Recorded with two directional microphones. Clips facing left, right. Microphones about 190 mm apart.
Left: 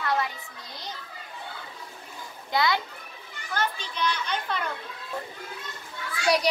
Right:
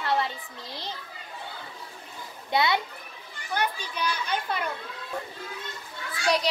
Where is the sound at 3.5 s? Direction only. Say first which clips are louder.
Even; 10° right (ahead or behind).